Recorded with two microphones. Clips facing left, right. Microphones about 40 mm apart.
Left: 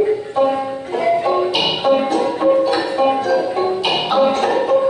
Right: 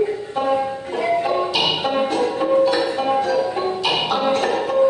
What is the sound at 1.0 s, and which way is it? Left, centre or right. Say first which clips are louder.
Music: left 4 dB; centre.